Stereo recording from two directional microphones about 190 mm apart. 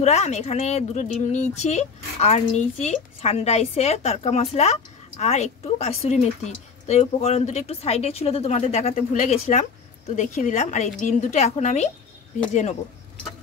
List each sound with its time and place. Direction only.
0.0 s a woman's voice: 35° left (ahead or behind)